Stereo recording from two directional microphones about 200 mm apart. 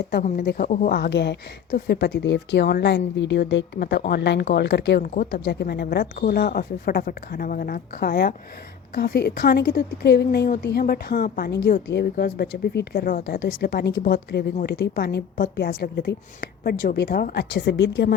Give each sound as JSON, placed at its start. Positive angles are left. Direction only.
{"t": 0.1, "sound": "a woman's voice", "side_deg": 45}
{"t": 5.0, "sound": "speech", "side_deg": 45}